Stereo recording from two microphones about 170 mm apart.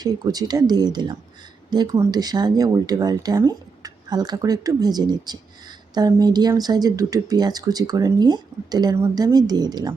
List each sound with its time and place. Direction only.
0.0 s speech: 20° right (ahead or behind)